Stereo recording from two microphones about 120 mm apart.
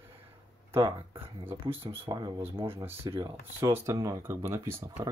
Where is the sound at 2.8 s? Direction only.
20° right (ahead or behind).